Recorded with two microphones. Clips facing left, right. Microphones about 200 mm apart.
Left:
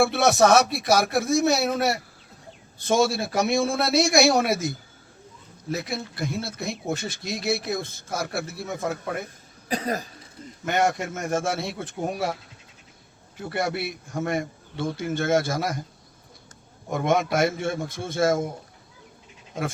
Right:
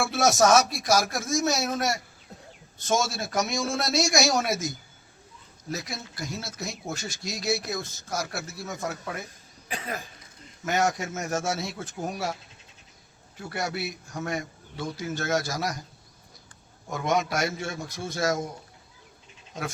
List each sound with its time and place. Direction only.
0.0 s a man's voice: 60° left (ahead or behind)
9.6 s speech: 40° left (ahead or behind)
10.8 s a man's voice: 55° left (ahead or behind)
13.5 s a man's voice: 55° left (ahead or behind)
16.9 s a man's voice: 55° left (ahead or behind)